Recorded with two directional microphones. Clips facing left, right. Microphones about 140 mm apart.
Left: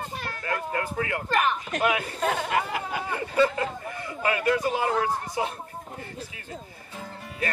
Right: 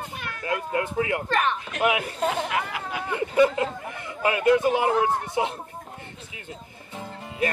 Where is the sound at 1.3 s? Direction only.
5° left (ahead or behind).